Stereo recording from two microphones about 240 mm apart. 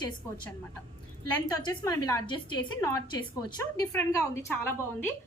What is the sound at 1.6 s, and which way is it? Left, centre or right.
A woman's voice, centre.